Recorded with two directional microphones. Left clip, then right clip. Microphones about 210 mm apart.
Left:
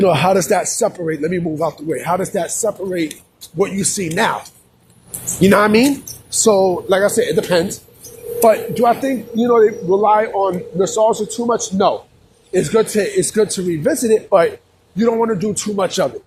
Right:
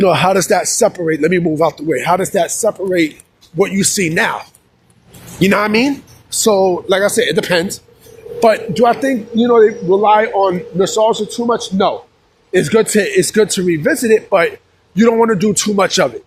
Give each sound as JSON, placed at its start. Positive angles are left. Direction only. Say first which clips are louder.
{"t": 0.0, "sound": "speech", "louder": "right 2 dB", "side_deg": -40}
{"t": 5.4, "sound": "a man's voice", "louder": "left 1 dB", "side_deg": -15}
{"t": 8.4, "sound": "a man's voice", "louder": "right 2 dB", "side_deg": -40}
{"t": 12.5, "sound": "speech", "louder": "right 3 dB", "side_deg": -40}
{"t": 13.8, "sound": "a man's voice", "louder": "right 1 dB", "side_deg": -20}
{"t": 14.9, "sound": "a man's voice", "louder": "right 5 dB", "side_deg": -45}